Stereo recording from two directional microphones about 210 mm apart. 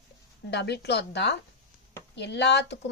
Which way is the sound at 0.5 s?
55° left (ahead or behind).